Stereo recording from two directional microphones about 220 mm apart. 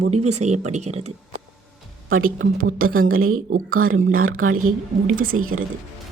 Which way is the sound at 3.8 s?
65° right (ahead or behind).